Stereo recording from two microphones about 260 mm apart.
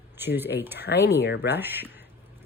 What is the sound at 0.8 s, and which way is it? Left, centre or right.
Speech, left.